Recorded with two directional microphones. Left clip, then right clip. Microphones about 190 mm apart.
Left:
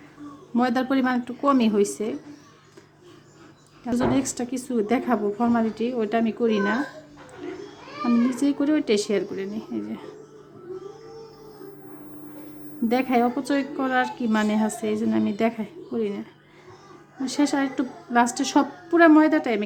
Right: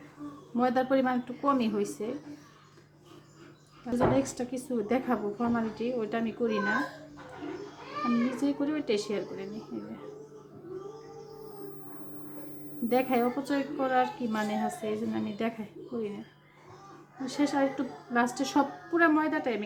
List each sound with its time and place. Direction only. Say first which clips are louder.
0.5 s a woman's voice: left 3 dB; 40° left (ahead or behind)
3.8 s a woman's voice: left 3 dB; 40° left (ahead or behind)
8.4 s a woman's voice: left 8 dB; 45° left (ahead or behind)
12.9 s a woman's voice: left 5 dB; 40° left (ahead or behind)
17.2 s a woman's voice: left 4 dB; 45° left (ahead or behind)